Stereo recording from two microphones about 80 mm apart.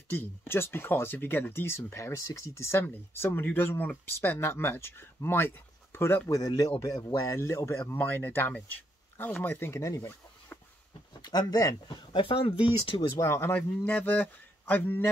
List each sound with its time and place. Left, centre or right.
0.1 s speech: left
6.2 s speech: left
11.1 s speech: left
12.1 s speech: left
13.2 s speech: left
13.5 s speech: centre